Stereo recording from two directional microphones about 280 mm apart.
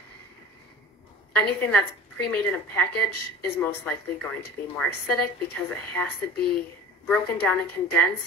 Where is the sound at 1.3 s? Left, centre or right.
Centre.